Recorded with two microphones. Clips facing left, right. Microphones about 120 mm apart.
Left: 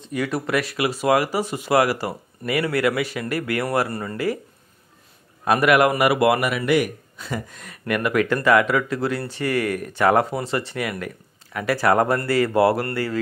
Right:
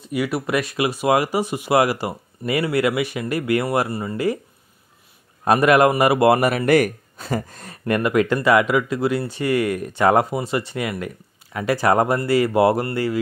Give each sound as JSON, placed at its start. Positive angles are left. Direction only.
{"t": 0.1, "sound": "speech", "side_deg": -10}
{"t": 5.4, "sound": "speech", "side_deg": -30}